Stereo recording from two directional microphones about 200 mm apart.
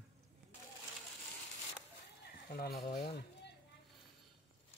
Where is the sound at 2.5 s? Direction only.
50° left (ahead or behind).